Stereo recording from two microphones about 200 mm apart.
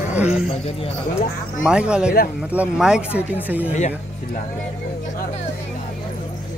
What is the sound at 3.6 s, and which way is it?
Speech, 35° left (ahead or behind).